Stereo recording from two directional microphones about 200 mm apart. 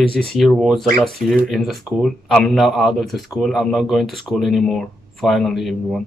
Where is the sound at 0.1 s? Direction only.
5° left (ahead or behind).